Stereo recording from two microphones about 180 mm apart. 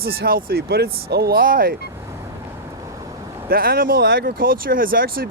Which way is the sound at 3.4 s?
55° right (ahead or behind).